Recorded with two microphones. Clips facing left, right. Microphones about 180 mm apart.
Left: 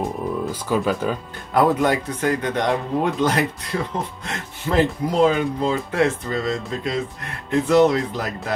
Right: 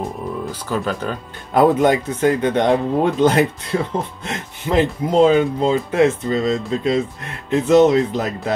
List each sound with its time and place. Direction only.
0.5 s speech: 10° left (ahead or behind)
1.5 s speech: 25° right (ahead or behind)